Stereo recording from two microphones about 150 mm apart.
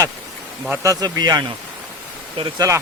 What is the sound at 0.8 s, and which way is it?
Speech, 25° right (ahead or behind).